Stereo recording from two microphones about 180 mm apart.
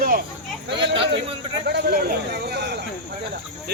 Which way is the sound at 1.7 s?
55° right (ahead or behind).